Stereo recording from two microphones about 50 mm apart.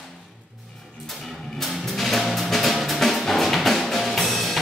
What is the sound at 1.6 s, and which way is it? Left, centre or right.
Music, centre.